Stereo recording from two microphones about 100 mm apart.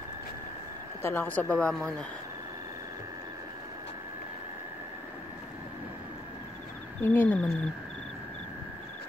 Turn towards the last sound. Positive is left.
turn(degrees=20)  # may be behind; listen again after turning